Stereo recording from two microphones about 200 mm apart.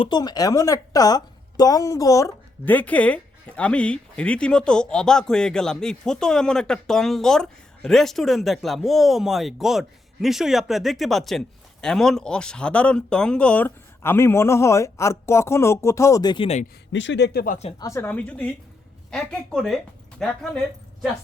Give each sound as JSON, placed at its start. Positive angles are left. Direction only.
{"t": 0.0, "sound": "a woman's voice", "side_deg": 20}
{"t": 16.9, "sound": "speech", "side_deg": 65}
{"t": 17.7, "sound": "a woman's voice", "side_deg": 20}